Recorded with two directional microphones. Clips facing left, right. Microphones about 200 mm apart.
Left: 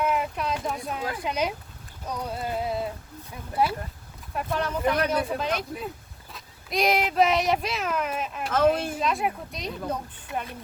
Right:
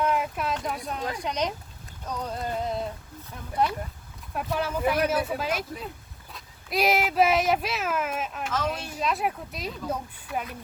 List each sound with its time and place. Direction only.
0.0 s speech: centre (ahead or behind)
2.0 s clip-clop: 10° left (ahead or behind)
3.6 s speech: 5° left (ahead or behind)
4.4 s speech: 5° right (ahead or behind)
8.5 s speech: 55° left (ahead or behind)
9.0 s speech: centre (ahead or behind)